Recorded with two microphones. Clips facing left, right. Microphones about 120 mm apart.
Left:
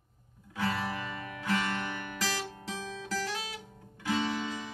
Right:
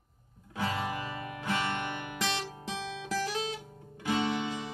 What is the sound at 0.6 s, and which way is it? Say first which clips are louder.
Music: even; 20° right (ahead or behind).